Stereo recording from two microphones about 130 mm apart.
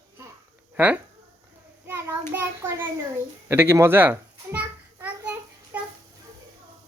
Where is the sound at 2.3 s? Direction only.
15° right (ahead or behind).